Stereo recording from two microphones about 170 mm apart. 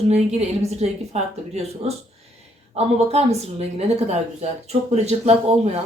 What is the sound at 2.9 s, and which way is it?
A woman's voice, 40° right (ahead or behind).